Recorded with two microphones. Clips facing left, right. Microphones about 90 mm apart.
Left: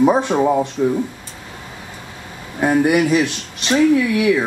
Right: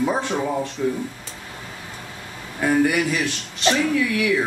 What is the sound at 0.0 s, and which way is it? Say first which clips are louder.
Speech: left 8 dB; 20° left (ahead or behind).